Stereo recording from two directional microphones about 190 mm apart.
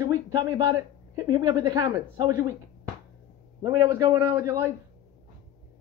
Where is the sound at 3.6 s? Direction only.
15° right (ahead or behind).